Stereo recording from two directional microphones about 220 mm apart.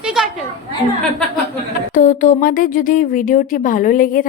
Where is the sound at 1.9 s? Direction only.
35° left (ahead or behind).